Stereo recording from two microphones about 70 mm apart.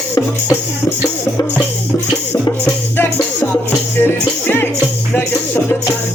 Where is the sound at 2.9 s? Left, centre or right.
Left.